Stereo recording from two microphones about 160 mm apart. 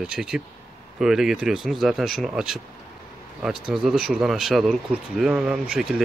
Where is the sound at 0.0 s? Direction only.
5° right (ahead or behind).